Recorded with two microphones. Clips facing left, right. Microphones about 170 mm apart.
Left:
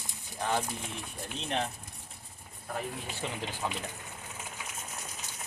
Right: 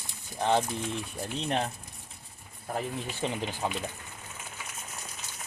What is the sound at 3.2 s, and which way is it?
Speech, 25° right (ahead or behind).